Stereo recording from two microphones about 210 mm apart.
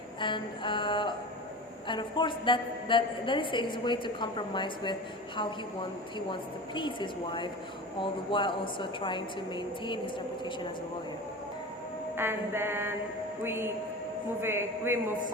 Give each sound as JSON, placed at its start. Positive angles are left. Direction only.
{"t": 0.2, "sound": "a woman's voice", "side_deg": 20}
{"t": 6.1, "sound": "a woman's voice", "side_deg": 20}
{"t": 12.1, "sound": "a sound", "side_deg": -10}